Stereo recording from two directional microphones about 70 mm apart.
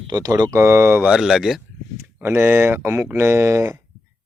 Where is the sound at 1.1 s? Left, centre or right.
Centre.